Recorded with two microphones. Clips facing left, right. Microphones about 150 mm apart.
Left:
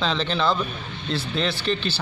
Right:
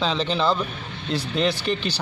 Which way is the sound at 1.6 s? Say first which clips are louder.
Even; 15° right (ahead or behind).